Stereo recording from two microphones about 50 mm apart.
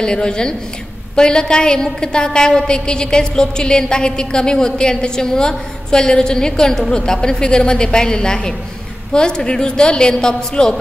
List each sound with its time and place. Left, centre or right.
0.0 s a woman's voice: centre